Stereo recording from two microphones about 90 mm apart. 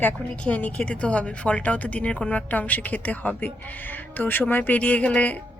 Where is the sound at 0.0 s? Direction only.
15° left (ahead or behind).